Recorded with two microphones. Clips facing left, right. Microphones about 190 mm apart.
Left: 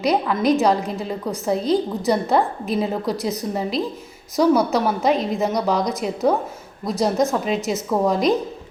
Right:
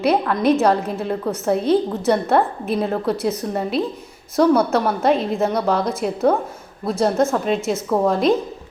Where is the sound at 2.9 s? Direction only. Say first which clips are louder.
Right 2 dB; 15° left (ahead or behind).